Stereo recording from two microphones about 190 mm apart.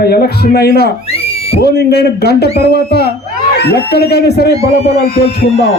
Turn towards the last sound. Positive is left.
turn(degrees=55)  # may be behind; listen again after turning